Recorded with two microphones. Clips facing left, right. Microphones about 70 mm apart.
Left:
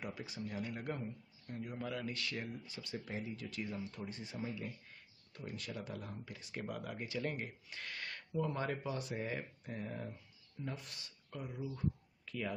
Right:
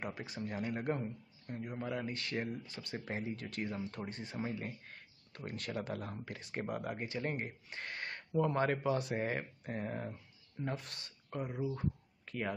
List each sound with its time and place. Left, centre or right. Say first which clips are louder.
0.0 s speech: right 3 dB; right
1.5 s speech: right 3 dB; right
6.5 s speech: right 4 dB; right
8.4 s speech: right 6 dB; right
10.6 s speech: right 5 dB; right